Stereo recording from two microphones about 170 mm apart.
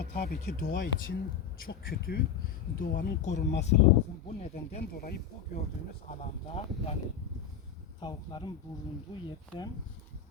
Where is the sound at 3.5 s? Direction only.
90° left.